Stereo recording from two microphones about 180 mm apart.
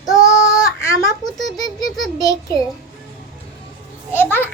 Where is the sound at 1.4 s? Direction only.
20° left (ahead or behind).